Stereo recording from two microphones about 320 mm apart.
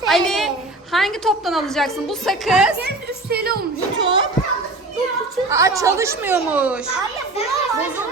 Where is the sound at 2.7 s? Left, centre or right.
Right.